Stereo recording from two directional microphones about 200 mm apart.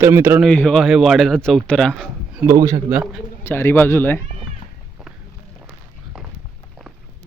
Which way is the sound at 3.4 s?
10° left (ahead or behind).